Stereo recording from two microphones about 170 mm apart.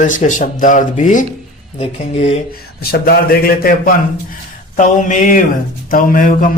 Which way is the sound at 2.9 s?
65° left (ahead or behind).